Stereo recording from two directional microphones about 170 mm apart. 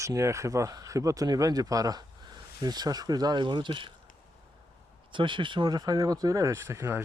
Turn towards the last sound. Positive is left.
turn(degrees=-15)  # may be behind; listen again after turning